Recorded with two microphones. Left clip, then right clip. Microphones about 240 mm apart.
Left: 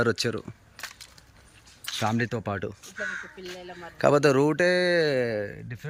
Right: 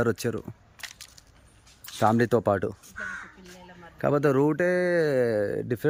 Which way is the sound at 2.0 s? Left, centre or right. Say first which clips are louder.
Right 7 dB; right.